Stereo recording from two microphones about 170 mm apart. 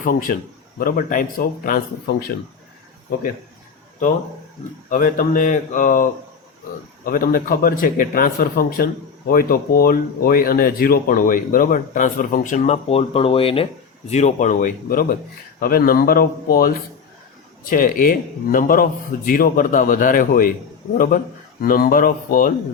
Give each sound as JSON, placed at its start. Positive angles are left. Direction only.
{"t": 0.0, "sound": "a man's voice", "side_deg": 55}
{"t": 4.9, "sound": "a man's voice", "side_deg": 50}
{"t": 21.6, "sound": "a man's voice", "side_deg": 55}